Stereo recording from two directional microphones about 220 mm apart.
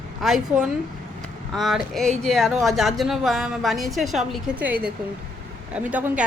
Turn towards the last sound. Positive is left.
turn(degrees=-5)  # may be behind; listen again after turning